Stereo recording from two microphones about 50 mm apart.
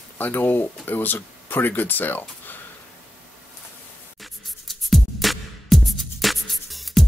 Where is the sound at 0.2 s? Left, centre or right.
Left.